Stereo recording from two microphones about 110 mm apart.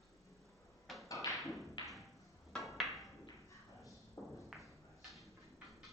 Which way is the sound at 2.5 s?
Centre (ahead or behind).